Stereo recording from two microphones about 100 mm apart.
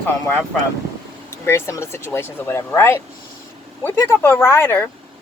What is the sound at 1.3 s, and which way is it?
A woman's voice, 25° left (ahead or behind).